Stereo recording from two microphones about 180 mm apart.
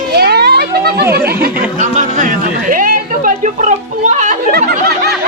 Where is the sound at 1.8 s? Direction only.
45° right (ahead or behind).